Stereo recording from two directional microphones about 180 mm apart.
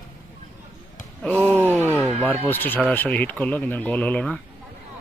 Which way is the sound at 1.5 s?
15° right (ahead or behind).